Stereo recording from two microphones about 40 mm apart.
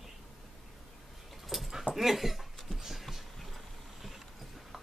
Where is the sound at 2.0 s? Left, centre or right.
Centre.